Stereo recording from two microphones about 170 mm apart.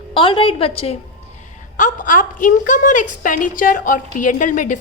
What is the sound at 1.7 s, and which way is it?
A woman's voice, 50° left (ahead or behind).